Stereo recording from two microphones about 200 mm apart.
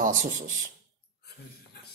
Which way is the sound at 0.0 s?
40° right (ahead or behind).